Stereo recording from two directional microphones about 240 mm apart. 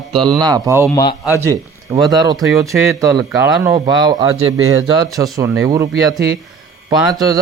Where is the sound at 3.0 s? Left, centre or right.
Centre.